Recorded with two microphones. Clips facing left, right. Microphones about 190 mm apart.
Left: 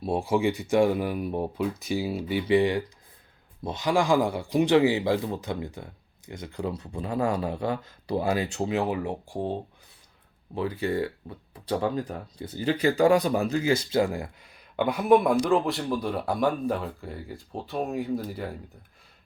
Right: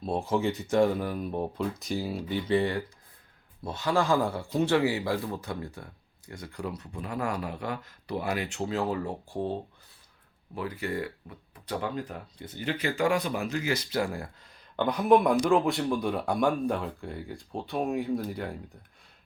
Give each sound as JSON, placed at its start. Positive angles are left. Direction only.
{"t": 0.0, "sound": "a man's voice", "side_deg": 10}
{"t": 8.7, "sound": "speech", "side_deg": 15}
{"t": 10.5, "sound": "a man's voice", "side_deg": 25}